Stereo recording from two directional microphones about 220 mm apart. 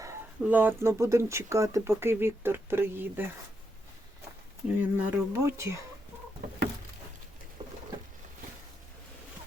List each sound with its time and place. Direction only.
0.0 s speech: 10° right (ahead or behind)
4.8 s speech: 10° right (ahead or behind)
7.6 s patter: 30° right (ahead or behind)